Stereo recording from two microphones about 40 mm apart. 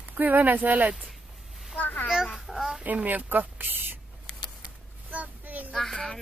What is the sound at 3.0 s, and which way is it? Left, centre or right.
Speech, right.